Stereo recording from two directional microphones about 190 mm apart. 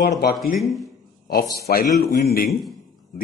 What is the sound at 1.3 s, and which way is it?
A man's voice, 50° left (ahead or behind).